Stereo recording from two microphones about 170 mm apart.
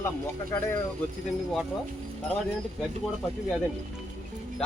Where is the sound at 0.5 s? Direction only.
15° left (ahead or behind).